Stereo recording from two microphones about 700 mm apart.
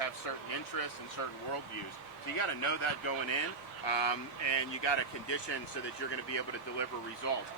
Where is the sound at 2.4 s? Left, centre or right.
Left.